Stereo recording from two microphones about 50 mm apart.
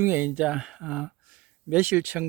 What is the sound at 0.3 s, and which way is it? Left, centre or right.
Speech, right.